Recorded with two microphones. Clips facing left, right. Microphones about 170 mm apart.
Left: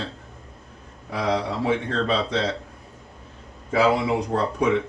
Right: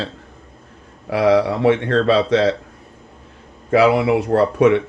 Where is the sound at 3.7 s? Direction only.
75° right (ahead or behind).